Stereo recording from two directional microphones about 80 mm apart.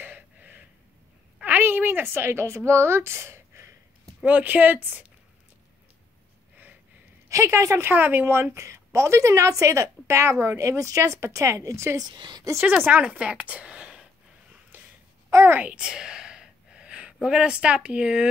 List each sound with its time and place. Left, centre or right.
0.0 s gasp: right
1.4 s a woman's voice: right
4.2 s speech: right
7.2 s a woman's voice: right
7.9 s a woman's voice: right
12.1 s a woman's voice: right
12.5 s a woman's voice: right
14.7 s a sound: right
15.5 s speech: centre